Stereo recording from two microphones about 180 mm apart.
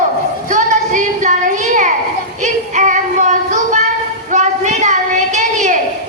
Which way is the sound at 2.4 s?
45° right (ahead or behind).